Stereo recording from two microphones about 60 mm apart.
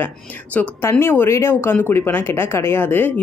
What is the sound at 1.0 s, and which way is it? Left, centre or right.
Speech, left.